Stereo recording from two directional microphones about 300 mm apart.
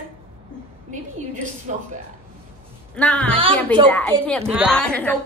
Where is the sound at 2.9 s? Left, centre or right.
Centre.